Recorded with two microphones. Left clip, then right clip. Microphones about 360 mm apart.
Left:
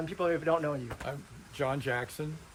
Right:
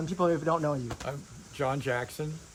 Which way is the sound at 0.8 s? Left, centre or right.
Centre.